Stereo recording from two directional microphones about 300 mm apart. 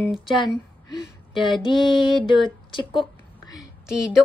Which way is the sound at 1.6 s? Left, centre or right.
Centre.